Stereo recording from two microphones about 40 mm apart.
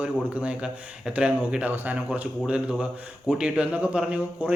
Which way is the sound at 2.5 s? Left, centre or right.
Right.